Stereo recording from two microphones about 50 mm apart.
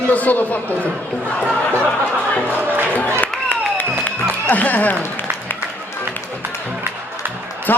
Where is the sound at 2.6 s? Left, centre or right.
Right.